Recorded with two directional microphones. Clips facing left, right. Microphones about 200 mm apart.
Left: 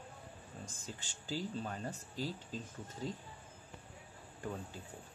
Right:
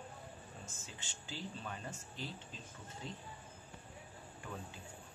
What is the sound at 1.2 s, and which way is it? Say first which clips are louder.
Speech: left 6 dB; 40° left (ahead or behind).